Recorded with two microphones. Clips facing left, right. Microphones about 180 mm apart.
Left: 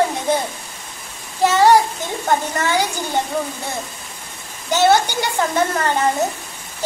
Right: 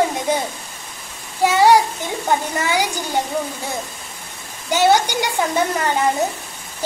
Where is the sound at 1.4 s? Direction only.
10° right (ahead or behind).